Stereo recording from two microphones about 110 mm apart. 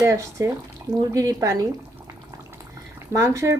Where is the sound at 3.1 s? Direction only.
30° right (ahead or behind).